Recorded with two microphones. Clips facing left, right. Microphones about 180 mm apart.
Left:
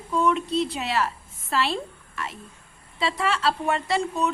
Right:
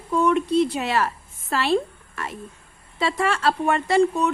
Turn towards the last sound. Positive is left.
turn(degrees=-55)  # may be behind; listen again after turning